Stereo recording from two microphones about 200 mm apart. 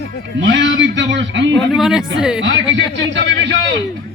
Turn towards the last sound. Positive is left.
turn(degrees=-65)  # may be behind; listen again after turning